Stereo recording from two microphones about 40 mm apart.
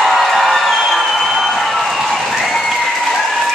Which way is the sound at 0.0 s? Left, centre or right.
Centre.